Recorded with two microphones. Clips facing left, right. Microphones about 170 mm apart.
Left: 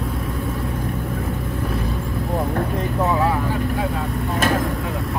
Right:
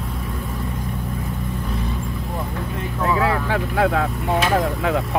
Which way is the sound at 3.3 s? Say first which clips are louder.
Even; 75° right (ahead or behind).